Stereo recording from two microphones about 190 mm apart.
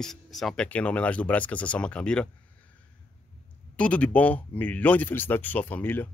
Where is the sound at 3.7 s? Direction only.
5° left (ahead or behind).